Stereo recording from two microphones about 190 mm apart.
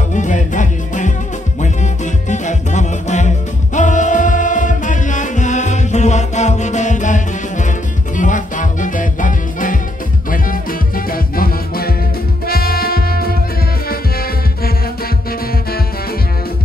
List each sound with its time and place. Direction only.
0.1 s music: 40° left (ahead or behind)